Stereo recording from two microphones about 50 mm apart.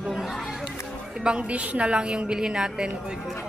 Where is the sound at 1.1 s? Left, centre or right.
Centre.